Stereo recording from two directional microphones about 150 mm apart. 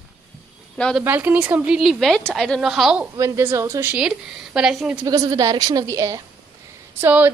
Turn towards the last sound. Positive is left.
turn(degrees=-15)  # may be behind; listen again after turning